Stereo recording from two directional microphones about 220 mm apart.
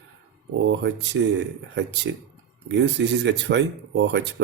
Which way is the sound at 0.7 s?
55° right (ahead or behind).